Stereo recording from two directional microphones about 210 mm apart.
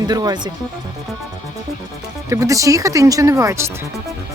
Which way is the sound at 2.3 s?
15° right (ahead or behind).